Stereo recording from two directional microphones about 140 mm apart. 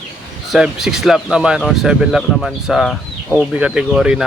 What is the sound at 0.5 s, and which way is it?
Speech, 5° right (ahead or behind).